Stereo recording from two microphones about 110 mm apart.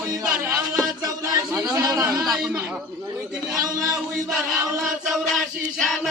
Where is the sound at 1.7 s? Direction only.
30° right (ahead or behind).